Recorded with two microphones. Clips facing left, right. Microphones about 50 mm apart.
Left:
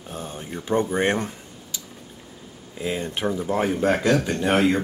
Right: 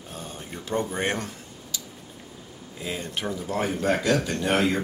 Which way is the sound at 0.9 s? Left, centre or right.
Centre.